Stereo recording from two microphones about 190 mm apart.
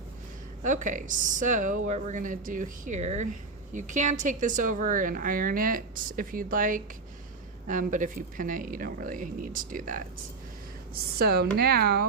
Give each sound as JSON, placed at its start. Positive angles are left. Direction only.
{"t": 0.6, "sound": "a woman's voice", "side_deg": -40}